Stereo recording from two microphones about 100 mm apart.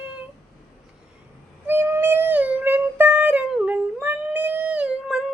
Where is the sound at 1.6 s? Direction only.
20° right (ahead or behind).